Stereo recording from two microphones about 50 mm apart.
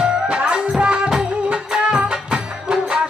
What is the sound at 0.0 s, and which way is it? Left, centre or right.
Music, right.